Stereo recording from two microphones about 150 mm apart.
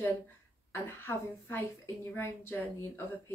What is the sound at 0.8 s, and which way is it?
A woman's voice, 15° left (ahead or behind).